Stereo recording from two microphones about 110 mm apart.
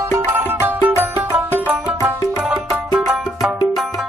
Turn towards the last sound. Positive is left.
turn(degrees=0)  # may be behind; listen again after turning